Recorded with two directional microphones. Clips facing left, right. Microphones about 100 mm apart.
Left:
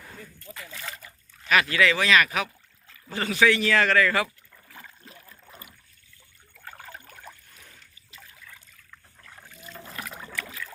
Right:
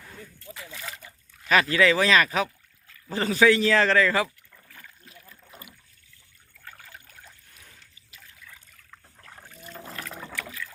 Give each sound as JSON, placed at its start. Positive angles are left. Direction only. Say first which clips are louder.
{"t": 0.3, "sound": "speech", "louder": "even", "side_deg": -20}
{"t": 0.7, "sound": "speech", "louder": "left 1 dB", "side_deg": -5}
{"t": 1.5, "sound": "speech", "louder": "right 2 dB", "side_deg": -30}
{"t": 4.5, "sound": "rowboat", "louder": "left 3 dB", "side_deg": 20}
{"t": 5.3, "sound": "boat", "louder": "even", "side_deg": 35}
{"t": 6.5, "sound": "trickle", "louder": "left 4 dB", "side_deg": 25}
{"t": 9.3, "sound": "boat", "louder": "right 1 dB", "side_deg": -20}
{"t": 9.6, "sound": "boat", "louder": "right 1 dB", "side_deg": -45}
{"t": 9.8, "sound": "water", "louder": "left 1 dB", "side_deg": 5}